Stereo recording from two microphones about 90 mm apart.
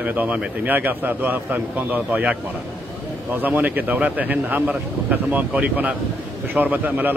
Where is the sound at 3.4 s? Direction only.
20° right (ahead or behind).